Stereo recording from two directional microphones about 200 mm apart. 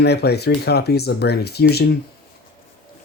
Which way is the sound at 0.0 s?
55° left (ahead or behind).